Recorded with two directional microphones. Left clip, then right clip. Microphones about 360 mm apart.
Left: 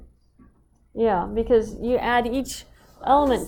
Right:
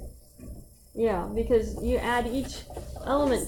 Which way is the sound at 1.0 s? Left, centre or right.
Centre.